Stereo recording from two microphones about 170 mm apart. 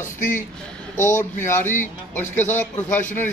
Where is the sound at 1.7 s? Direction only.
10° left (ahead or behind).